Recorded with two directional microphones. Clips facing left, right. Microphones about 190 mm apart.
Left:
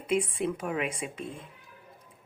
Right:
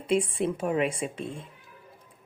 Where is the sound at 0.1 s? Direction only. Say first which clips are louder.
Right 2 dB; 30° right (ahead or behind).